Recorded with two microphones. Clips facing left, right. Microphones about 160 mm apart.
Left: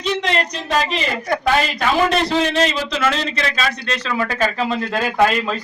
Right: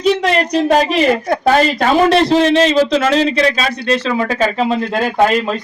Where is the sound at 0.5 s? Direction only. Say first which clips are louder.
Right 9 dB; 60° right (ahead or behind).